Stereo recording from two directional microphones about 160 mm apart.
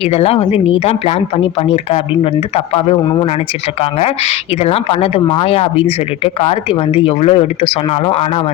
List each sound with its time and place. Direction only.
0.1 s speech: 40° left (ahead or behind)
4.0 s speech: 40° left (ahead or behind)